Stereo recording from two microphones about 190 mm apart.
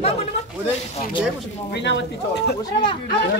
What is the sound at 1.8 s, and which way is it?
Speech, 65° left (ahead or behind).